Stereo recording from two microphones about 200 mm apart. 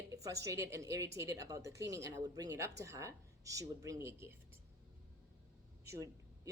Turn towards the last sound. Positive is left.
turn(degrees=-15)  # may be behind; listen again after turning